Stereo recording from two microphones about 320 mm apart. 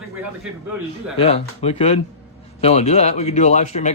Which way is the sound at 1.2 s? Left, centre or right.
Centre.